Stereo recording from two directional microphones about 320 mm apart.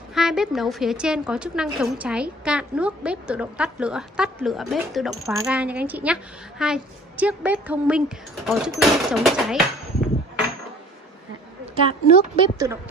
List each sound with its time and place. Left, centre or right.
0.1 s a woman's voice: centre
11.9 s speech: left
12.5 s speech: centre